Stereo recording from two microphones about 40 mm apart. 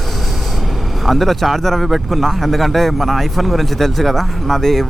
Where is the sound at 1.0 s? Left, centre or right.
Centre.